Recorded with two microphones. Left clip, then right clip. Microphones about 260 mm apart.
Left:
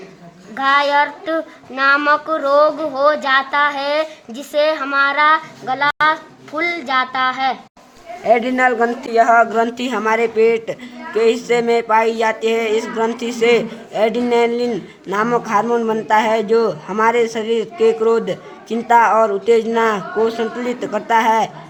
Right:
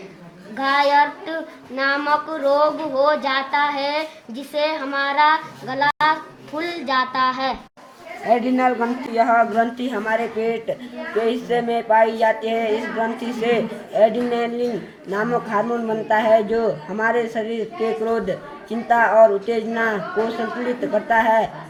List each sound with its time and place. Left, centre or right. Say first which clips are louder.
0.5 s a man's voice: left 2 dB; left